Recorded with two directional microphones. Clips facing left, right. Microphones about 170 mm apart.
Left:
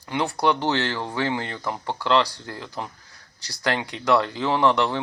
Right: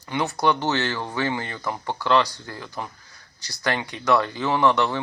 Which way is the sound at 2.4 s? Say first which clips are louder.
Left 1 dB; centre (ahead or behind).